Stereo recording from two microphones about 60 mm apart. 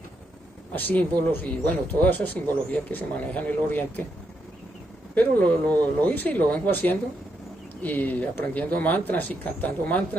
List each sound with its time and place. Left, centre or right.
0.7 s speech: left
5.1 s speech: left